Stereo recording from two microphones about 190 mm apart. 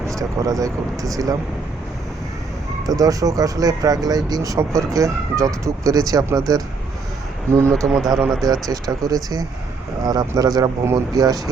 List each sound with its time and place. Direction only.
0.2 s speech: 20° right (ahead or behind)
2.8 s speech: 20° right (ahead or behind)
7.5 s speech: 15° right (ahead or behind)
7.9 s speech: centre (ahead or behind)
8.7 s speech: 20° right (ahead or behind)